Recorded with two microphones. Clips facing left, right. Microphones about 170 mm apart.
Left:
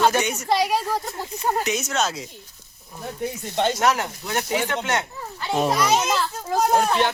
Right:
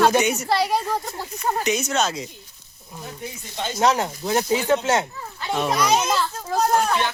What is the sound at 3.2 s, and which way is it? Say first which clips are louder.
Speech: left 9 dB; 65° left (ahead or behind).